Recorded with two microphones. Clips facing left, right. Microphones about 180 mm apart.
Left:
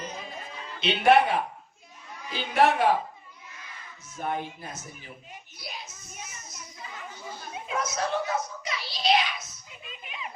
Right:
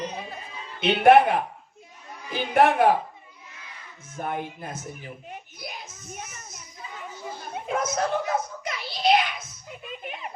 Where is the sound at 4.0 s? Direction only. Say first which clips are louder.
Right 1 dB; 55° right (ahead or behind).